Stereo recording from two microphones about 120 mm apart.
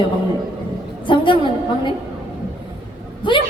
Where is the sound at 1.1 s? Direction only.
40° left (ahead or behind).